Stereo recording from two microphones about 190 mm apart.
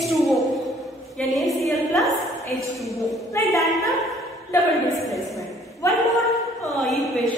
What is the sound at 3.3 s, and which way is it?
Speech, 15° left (ahead or behind).